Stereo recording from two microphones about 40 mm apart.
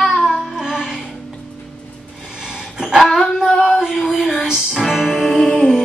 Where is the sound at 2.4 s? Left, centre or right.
Centre.